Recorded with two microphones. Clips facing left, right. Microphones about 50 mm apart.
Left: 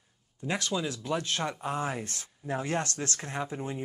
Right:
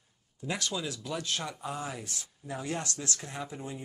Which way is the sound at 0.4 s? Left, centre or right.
Left.